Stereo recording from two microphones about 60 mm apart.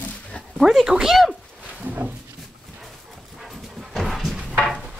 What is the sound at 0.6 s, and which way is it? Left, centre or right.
Speech, centre.